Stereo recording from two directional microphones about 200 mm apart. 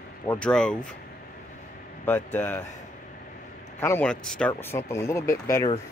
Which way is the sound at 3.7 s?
10° left (ahead or behind).